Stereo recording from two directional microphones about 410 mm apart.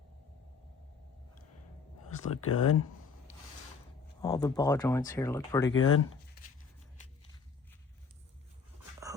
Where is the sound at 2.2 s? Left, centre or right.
Left.